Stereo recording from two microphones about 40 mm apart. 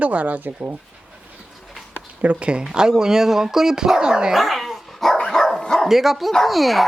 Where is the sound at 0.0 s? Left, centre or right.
Right.